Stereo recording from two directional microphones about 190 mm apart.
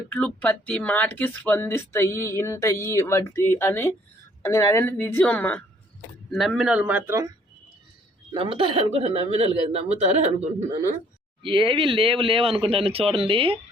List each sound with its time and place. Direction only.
0.1 s a man's voice: 5° left (ahead or behind); by 7.3 s 10° right (ahead or behind)
8.3 s speech: 30° right (ahead or behind)
11.4 s speech: 25° right (ahead or behind)